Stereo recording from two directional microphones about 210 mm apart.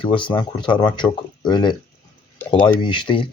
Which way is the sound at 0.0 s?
25° left (ahead or behind).